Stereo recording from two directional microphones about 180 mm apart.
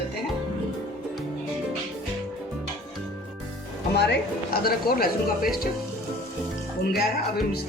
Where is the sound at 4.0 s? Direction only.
65° left (ahead or behind).